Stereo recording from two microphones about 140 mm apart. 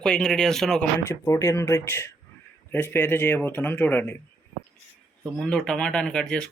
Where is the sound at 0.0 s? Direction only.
5° left (ahead or behind).